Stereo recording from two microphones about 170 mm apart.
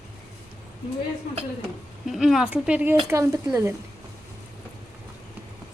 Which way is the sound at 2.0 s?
Centre (ahead or behind).